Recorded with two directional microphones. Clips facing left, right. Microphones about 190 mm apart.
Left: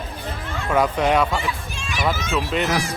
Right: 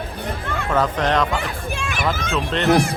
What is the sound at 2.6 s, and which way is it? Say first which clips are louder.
Speech: right 6 dB; 60° right (ahead or behind).